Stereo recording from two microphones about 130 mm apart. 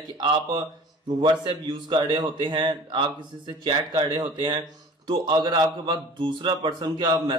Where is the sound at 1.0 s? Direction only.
35° right (ahead or behind).